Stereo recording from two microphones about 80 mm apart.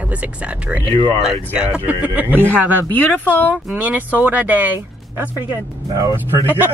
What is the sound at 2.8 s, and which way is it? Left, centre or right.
Speech, left.